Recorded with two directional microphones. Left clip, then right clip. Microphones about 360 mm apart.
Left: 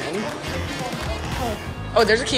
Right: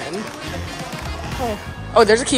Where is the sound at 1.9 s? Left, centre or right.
Centre.